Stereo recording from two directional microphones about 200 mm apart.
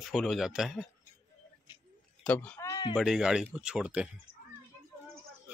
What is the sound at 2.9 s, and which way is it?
Speech, centre (ahead or behind).